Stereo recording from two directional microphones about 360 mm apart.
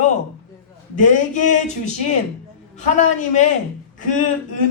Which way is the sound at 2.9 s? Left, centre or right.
Centre.